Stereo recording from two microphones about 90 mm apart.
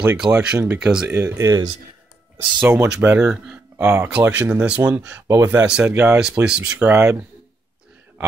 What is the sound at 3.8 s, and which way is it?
Speech, 30° right (ahead or behind).